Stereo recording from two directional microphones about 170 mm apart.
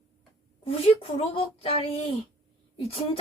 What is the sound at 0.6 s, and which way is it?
A woman's voice, 30° left (ahead or behind).